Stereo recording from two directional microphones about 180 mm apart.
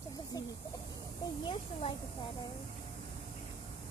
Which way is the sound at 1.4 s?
25° left (ahead or behind).